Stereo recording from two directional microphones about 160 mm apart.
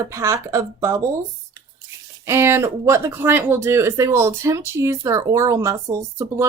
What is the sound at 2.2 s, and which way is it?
Speech, 15° right (ahead or behind).